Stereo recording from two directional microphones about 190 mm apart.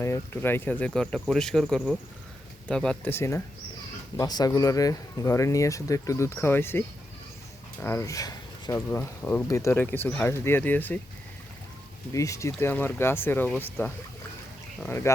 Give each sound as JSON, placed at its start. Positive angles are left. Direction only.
{"t": 0.0, "sound": "speech", "side_deg": 15}
{"t": 12.1, "sound": "speech", "side_deg": 15}
{"t": 14.8, "sound": "speech", "side_deg": 10}